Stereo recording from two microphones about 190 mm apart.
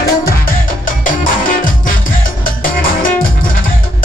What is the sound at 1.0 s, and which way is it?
Music, 45° left (ahead or behind).